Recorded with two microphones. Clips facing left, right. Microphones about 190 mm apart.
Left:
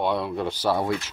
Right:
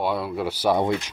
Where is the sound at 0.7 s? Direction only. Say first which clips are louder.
Right 3 dB; 20° right (ahead or behind).